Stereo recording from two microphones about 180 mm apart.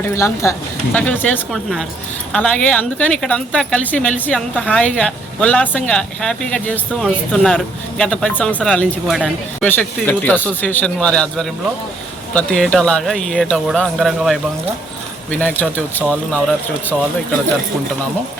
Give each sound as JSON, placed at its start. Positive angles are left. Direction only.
{"t": 0.1, "sound": "a woman's voice", "side_deg": 15}